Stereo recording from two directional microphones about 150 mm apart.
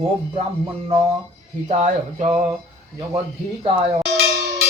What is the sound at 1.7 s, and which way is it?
Speech, 50° right (ahead or behind).